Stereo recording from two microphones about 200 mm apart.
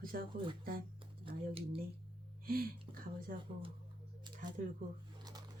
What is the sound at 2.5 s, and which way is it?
Speech, 45° right (ahead or behind).